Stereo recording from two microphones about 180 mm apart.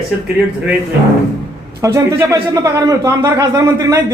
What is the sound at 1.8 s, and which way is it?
Speech, 15° right (ahead or behind).